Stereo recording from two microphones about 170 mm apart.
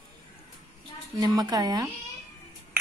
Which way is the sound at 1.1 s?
25° right (ahead or behind).